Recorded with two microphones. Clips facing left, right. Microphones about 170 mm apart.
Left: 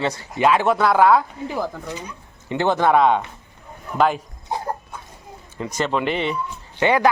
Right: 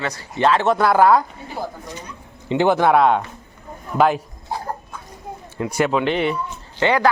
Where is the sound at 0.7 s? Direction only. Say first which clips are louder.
Right 1 dB; centre (ahead or behind).